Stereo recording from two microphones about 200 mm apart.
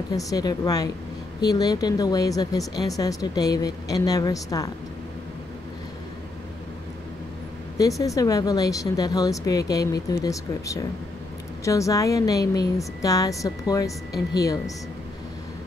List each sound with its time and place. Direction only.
0.1 s speech: 15° left (ahead or behind)
8.0 s speech: 15° left (ahead or behind)